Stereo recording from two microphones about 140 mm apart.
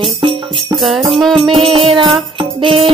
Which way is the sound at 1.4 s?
40° right (ahead or behind).